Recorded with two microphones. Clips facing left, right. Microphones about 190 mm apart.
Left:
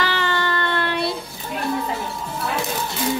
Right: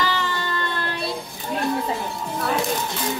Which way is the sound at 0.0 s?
70° left (ahead or behind).